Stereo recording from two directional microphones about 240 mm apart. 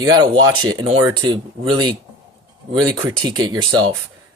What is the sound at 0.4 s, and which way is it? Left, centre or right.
Speech, centre.